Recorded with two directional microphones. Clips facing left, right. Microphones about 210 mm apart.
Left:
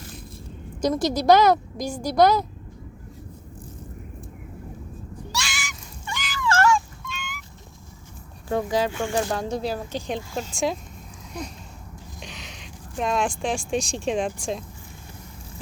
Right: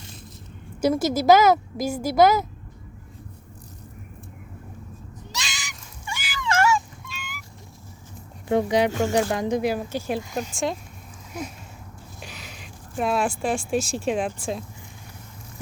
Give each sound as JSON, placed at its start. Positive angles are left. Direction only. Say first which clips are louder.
{"t": 0.8, "sound": "a woman's voice", "louder": "right 1 dB", "side_deg": -5}
{"t": 5.3, "sound": "a sound", "louder": "left 3 dB", "side_deg": -20}
{"t": 6.4, "sound": "fowl", "louder": "left 1 dB", "side_deg": -15}
{"t": 8.4, "sound": "speech", "louder": "right 3 dB", "side_deg": -20}
{"t": 8.9, "sound": "speech", "louder": "right 4 dB", "side_deg": -40}
{"t": 9.1, "sound": "speech", "louder": "right 3 dB", "side_deg": -15}
{"t": 10.5, "sound": "a woman's voice", "louder": "left 1 dB", "side_deg": 0}